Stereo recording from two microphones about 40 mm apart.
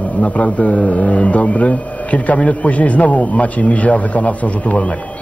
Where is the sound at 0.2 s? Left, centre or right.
Left.